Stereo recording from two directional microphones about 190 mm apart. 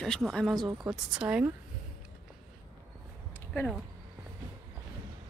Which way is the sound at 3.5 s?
Centre (ahead or behind).